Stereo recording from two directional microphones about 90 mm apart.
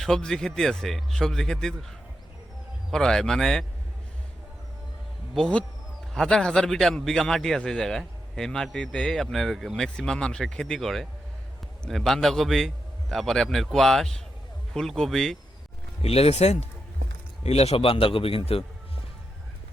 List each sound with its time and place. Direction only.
0.0 s a man's voice: 5° left (ahead or behind)
2.9 s a man's voice: 5° left (ahead or behind)
6.1 s a man's voice: 5° left (ahead or behind)
16.0 s speech: 90° left
17.7 s a man's voice: 90° left